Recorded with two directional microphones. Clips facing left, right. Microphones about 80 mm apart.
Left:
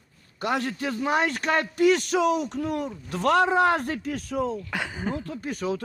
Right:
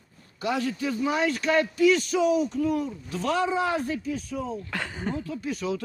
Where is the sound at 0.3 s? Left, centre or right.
Left.